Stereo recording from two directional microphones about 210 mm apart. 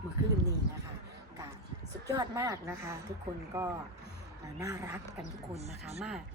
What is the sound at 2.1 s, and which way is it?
Speech, 15° right (ahead or behind).